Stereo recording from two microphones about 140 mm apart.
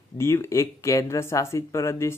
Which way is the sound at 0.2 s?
20° left (ahead or behind).